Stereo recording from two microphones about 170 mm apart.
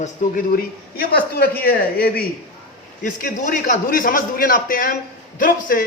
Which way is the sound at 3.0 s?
50° left (ahead or behind).